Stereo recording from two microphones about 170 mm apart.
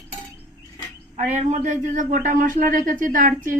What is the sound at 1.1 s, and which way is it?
A man's voice, 45° right (ahead or behind).